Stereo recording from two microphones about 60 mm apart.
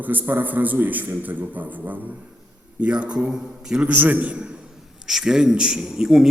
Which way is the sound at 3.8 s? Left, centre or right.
Right.